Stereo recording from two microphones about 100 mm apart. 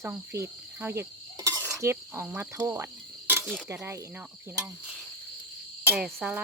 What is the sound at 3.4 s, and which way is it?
Cricket, centre (ahead or behind).